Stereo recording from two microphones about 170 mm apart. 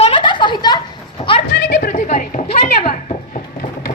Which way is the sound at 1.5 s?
80° left.